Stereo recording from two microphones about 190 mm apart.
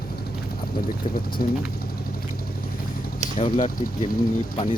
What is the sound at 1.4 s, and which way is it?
Speech, 50° left (ahead or behind).